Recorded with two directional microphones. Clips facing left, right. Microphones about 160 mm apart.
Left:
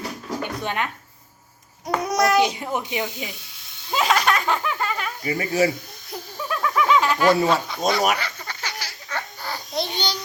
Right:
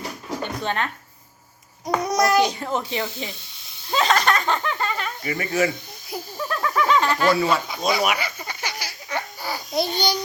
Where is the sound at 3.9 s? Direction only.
5° left (ahead or behind).